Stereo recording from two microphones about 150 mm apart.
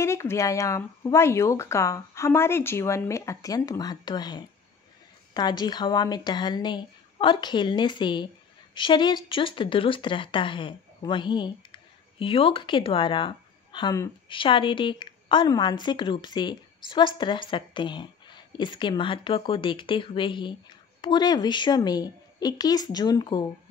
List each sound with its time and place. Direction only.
0.0 s speech: 20° left (ahead or behind)